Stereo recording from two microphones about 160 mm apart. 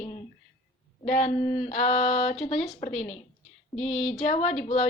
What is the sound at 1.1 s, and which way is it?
A woman's voice, 50° left (ahead or behind).